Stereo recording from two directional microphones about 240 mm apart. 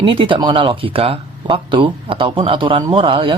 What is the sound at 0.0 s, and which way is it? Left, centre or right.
Speech, right.